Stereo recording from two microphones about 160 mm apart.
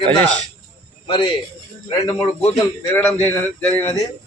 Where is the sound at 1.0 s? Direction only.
30° left (ahead or behind).